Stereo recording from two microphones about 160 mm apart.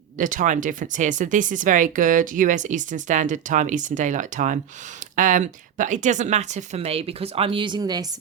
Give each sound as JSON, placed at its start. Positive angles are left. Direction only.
{"t": 0.2, "sound": "speech", "side_deg": -55}